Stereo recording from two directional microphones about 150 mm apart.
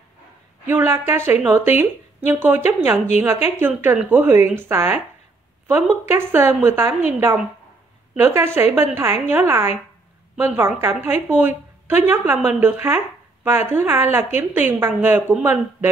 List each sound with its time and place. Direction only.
0.7 s a woman's voice: 15° right (ahead or behind)
8.2 s a woman's voice: 15° right (ahead or behind)